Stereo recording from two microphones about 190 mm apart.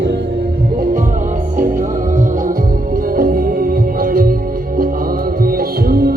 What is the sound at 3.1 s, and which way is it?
Music, 50° right (ahead or behind).